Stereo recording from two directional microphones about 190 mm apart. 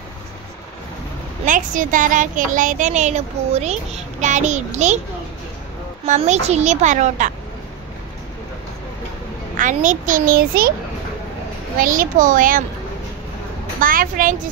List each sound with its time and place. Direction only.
1.4 s a child's voice: 45° right (ahead or behind)
6.0 s a child's voice: 40° right (ahead or behind)
9.6 s a child's voice: 40° right (ahead or behind)
11.8 s a child's voice: 45° right (ahead or behind)
13.7 s a child's voice: 45° right (ahead or behind)